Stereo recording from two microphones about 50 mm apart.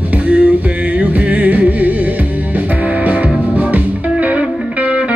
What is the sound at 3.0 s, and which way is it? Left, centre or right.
Music, right.